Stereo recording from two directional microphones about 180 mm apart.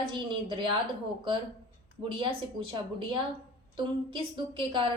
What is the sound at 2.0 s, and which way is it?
Speech, 30° right (ahead or behind).